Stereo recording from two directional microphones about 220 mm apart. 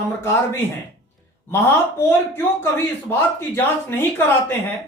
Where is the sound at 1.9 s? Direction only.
10° left (ahead or behind).